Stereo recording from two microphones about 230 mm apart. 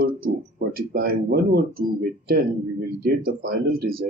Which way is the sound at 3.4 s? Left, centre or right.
Right.